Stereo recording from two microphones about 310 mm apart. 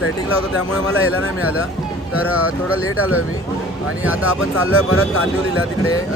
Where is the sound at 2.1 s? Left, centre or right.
Centre.